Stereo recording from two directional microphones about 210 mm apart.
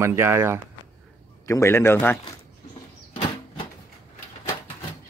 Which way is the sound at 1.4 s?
15° left (ahead or behind).